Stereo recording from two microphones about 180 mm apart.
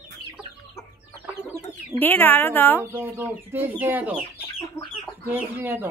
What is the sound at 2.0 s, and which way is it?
Speech, 10° left (ahead or behind).